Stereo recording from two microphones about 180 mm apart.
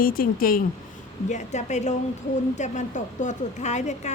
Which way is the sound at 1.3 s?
40° left (ahead or behind).